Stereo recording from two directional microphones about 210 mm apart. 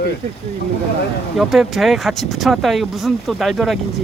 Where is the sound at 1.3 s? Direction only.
Centre (ahead or behind).